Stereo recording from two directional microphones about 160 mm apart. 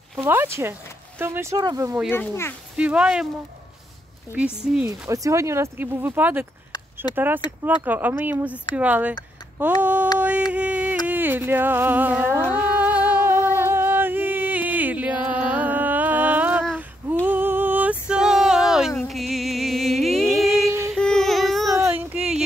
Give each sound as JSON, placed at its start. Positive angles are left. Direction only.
{"t": 0.2, "sound": "speech", "side_deg": -15}
{"t": 2.0, "sound": "speech", "side_deg": 15}
{"t": 2.8, "sound": "speech", "side_deg": -5}
{"t": 4.8, "sound": "speech", "side_deg": -20}
{"t": 9.8, "sound": "a sound", "side_deg": -10}
{"t": 10.5, "sound": "music", "side_deg": -10}
{"t": 11.1, "sound": "speech", "side_deg": -10}
{"t": 12.5, "sound": "music", "side_deg": -10}
{"t": 17.3, "sound": "a sound", "side_deg": -10}
{"t": 18.0, "sound": "music", "side_deg": -5}
{"t": 20.3, "sound": "a sound", "side_deg": 0}
{"t": 21.8, "sound": "a sound", "side_deg": -10}